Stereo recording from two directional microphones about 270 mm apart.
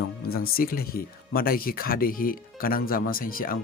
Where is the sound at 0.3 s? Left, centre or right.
Left.